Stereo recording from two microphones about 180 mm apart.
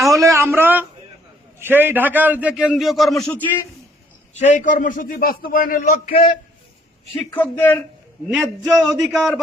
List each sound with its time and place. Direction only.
0.2 s a sound: 15° right (ahead or behind)
1.5 s a man's voice: 10° right (ahead or behind); by 3.6 s 10° left (ahead or behind)
4.4 s a man's voice: 40° left (ahead or behind)
6.1 s a man's voice: 30° left (ahead or behind)
7.3 s speech: 10° left (ahead or behind)
8.6 s speech: centre (ahead or behind)